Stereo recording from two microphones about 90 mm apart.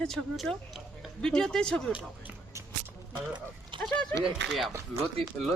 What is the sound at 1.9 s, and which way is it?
Speech, 15° right (ahead or behind).